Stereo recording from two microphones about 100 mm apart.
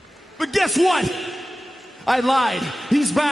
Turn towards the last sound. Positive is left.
turn(degrees=0)  # may be behind; listen again after turning